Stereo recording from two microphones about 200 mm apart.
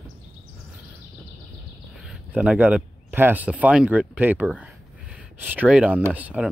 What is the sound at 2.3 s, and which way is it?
Speech, 5° right (ahead or behind).